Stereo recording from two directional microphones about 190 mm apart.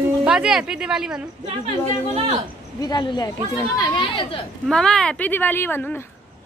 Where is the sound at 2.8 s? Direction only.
25° left (ahead or behind).